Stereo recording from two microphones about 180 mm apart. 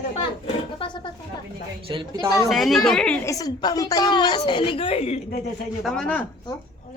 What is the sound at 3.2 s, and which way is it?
A woman's voice, 20° left (ahead or behind).